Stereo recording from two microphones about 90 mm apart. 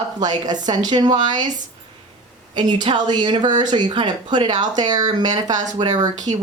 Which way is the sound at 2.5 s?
55° right (ahead or behind).